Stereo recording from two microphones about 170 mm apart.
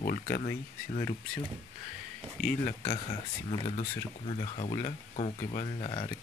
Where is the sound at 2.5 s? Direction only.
50° left (ahead or behind).